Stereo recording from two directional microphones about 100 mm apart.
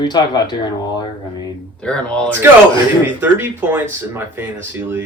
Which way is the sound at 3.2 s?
20° right (ahead or behind).